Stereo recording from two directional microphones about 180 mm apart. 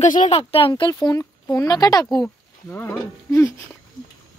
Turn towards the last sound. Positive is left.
turn(degrees=15)  # may be behind; listen again after turning